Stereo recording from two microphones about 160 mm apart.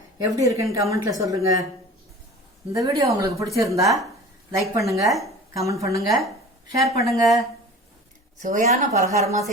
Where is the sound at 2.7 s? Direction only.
20° right (ahead or behind).